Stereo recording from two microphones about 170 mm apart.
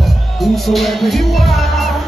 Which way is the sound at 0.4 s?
Centre (ahead or behind).